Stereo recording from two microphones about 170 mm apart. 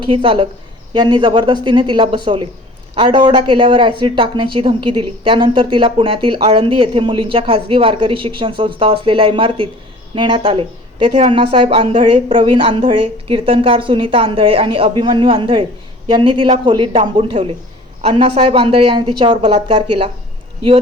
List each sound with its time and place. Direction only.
0.2 s speech: 30° right (ahead or behind)